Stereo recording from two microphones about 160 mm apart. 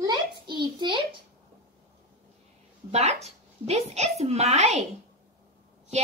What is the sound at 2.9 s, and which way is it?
A woman's voice, 45° right (ahead or behind).